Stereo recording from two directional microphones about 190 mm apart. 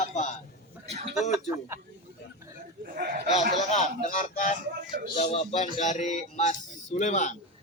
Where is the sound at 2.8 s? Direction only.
50° right (ahead or behind).